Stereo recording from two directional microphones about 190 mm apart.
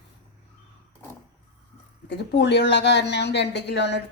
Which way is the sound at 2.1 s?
65° left (ahead or behind).